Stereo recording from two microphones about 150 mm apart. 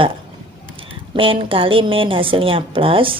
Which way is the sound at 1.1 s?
35° right (ahead or behind).